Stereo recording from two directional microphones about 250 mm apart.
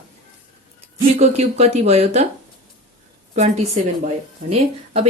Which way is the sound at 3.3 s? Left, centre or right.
Right.